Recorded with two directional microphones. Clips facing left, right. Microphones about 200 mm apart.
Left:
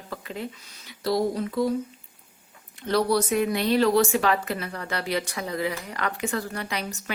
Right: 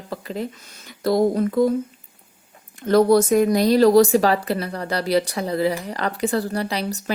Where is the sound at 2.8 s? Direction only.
50° right (ahead or behind).